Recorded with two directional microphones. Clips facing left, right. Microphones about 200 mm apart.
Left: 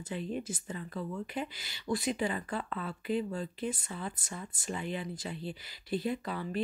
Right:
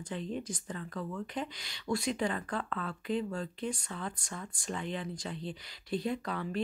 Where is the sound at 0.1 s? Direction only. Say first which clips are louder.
Left 1 dB; 5° left (ahead or behind).